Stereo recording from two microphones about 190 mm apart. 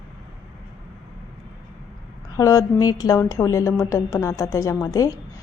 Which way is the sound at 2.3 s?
20° left (ahead or behind).